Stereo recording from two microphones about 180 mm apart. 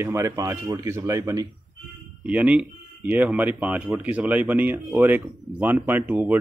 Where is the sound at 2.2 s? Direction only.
5° right (ahead or behind).